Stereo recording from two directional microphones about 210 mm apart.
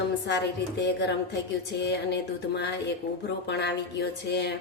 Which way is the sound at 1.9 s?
55° left (ahead or behind).